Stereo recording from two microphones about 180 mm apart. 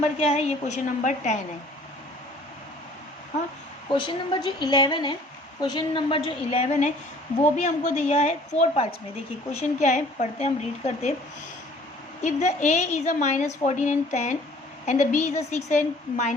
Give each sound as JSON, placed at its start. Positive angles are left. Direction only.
{"t": 0.0, "sound": "a woman's voice", "side_deg": 35}
{"t": 3.8, "sound": "a woman's voice", "side_deg": 25}
{"t": 12.2, "sound": "a woman's voice", "side_deg": 40}